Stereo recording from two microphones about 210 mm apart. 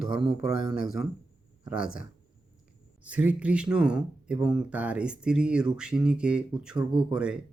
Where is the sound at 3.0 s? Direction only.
5° right (ahead or behind).